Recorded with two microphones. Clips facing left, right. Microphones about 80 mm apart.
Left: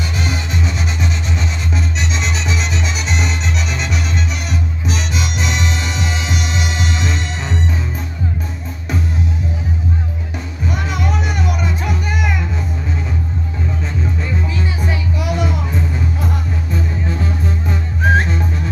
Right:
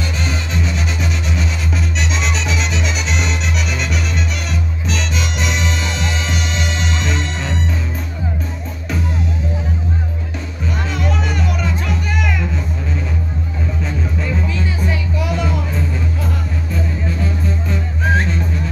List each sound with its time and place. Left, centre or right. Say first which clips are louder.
0.2 s music: left 2 dB; centre
11.2 s music: even; centre
15.1 s music: left 1 dB; centre
17.2 s music: even; left